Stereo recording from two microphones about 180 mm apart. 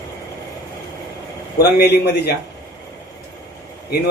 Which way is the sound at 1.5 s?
70° left (ahead or behind).